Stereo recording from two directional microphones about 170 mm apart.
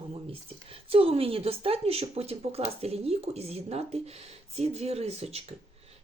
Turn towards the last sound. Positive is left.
turn(degrees=-35)  # may be behind; listen again after turning